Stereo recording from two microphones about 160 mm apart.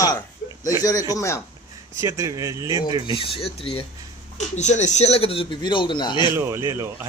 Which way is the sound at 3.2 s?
35° left (ahead or behind).